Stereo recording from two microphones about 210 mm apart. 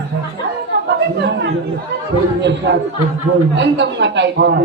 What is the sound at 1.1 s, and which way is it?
Chatter, 55° right (ahead or behind).